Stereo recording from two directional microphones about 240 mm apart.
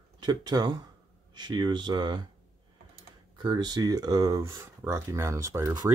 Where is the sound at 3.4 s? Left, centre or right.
Centre.